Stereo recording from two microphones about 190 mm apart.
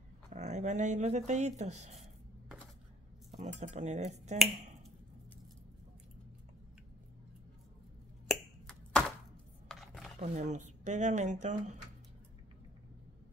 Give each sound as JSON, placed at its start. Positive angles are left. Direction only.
{"t": 0.3, "sound": "speech", "side_deg": -40}
{"t": 3.3, "sound": "speech", "side_deg": -40}
{"t": 8.3, "sound": "finger snapping", "side_deg": 5}
{"t": 9.7, "sound": "computer keyboard", "side_deg": 5}
{"t": 10.1, "sound": "speech", "side_deg": -40}